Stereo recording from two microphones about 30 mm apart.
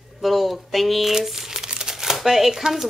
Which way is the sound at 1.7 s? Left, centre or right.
Right.